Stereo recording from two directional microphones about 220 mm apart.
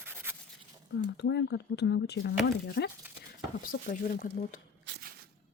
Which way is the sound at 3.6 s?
40° left (ahead or behind).